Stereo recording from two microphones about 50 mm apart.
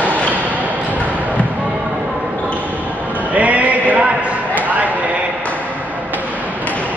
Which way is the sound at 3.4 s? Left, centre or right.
Right.